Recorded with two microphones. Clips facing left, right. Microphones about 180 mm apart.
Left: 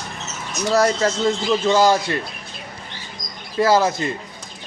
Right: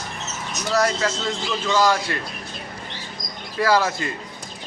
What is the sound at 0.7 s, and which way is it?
Speech, 30° left (ahead or behind).